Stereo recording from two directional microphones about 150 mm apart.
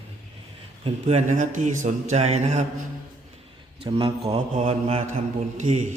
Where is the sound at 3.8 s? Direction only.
40° right (ahead or behind).